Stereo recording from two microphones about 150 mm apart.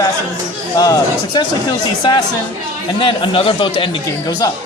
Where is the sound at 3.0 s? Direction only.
35° left (ahead or behind).